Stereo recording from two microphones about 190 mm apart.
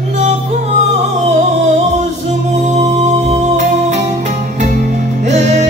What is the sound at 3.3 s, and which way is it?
Music, 35° right (ahead or behind).